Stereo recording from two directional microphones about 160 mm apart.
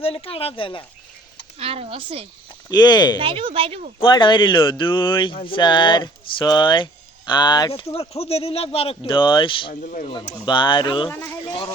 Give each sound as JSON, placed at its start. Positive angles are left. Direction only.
{"t": 0.0, "sound": "speech", "side_deg": 35}
{"t": 1.5, "sound": "speech", "side_deg": -40}
{"t": 2.6, "sound": "speech", "side_deg": 25}
{"t": 3.2, "sound": "speech", "side_deg": -35}
{"t": 4.0, "sound": "speech", "side_deg": 30}
{"t": 9.8, "sound": "speech", "side_deg": 55}
{"t": 10.4, "sound": "speech", "side_deg": 30}